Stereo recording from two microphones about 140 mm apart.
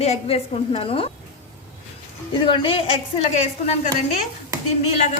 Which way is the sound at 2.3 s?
40° left (ahead or behind).